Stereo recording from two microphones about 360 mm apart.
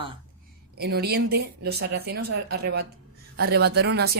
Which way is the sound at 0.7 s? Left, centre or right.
Right.